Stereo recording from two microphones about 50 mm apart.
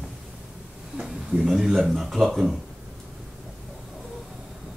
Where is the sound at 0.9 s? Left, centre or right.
Centre.